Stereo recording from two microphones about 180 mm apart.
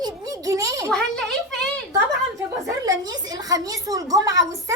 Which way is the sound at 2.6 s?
20° right (ahead or behind).